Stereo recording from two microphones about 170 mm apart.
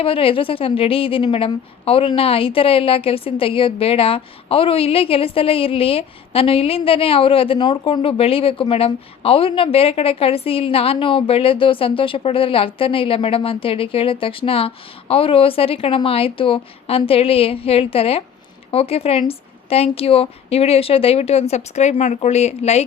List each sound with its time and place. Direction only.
0.0 s a woman's voice: 30° left (ahead or behind)